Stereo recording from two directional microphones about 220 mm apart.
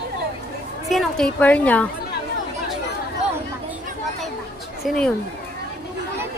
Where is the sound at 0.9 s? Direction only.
Centre (ahead or behind).